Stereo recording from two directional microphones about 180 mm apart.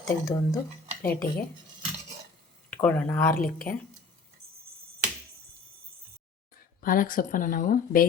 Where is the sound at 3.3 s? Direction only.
55° left (ahead or behind).